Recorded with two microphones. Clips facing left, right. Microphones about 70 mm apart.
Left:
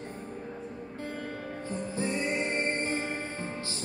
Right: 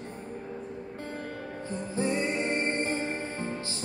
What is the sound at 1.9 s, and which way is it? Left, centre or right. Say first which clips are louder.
Music: right 3 dB; right.